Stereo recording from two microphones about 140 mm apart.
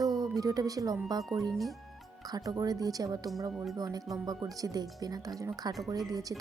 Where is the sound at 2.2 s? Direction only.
25° right (ahead or behind).